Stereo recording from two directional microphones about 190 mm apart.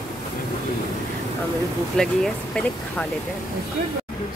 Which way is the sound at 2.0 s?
5° left (ahead or behind).